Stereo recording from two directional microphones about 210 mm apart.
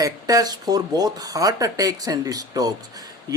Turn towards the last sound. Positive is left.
turn(degrees=-20)  # may be behind; listen again after turning